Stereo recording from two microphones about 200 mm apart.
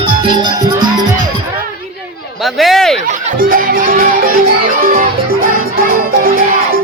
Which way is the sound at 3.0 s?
45° right (ahead or behind).